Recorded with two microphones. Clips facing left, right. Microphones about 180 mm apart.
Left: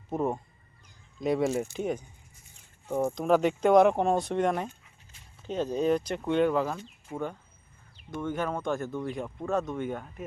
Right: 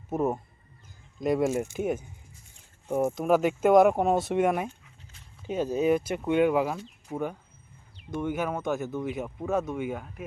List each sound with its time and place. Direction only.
0.1 s speech: 5° right (ahead or behind)